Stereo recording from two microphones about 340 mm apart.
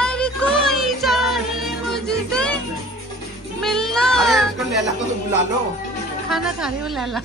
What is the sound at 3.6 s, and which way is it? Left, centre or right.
Child singing, centre.